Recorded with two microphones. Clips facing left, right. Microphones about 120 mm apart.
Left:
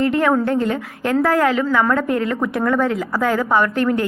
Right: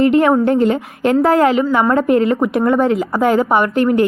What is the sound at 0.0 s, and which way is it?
A woman's voice, 20° right (ahead or behind).